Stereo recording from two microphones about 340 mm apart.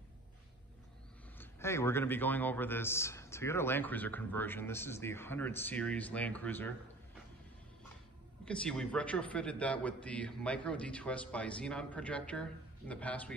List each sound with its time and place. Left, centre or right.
1.4 s a man's voice: centre
8.5 s a man's voice: centre